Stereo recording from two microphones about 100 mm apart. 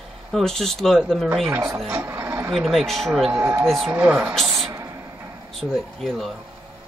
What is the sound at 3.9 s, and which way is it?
Speech, 15° right (ahead or behind).